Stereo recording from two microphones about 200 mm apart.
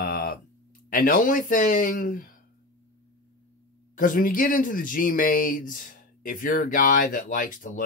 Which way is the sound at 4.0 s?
45° left (ahead or behind).